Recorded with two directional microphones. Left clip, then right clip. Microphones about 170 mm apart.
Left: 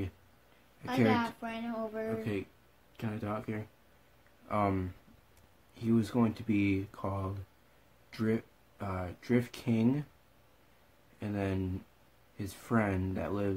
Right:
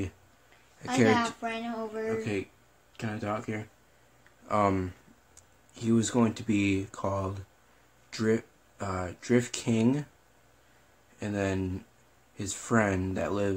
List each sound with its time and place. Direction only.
1.1 s speech: 20° left (ahead or behind)
2.0 s speech: centre (ahead or behind)
11.1 s speech: 5° right (ahead or behind)